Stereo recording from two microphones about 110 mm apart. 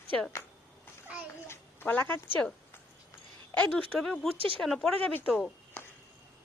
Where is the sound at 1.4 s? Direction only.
20° left (ahead or behind).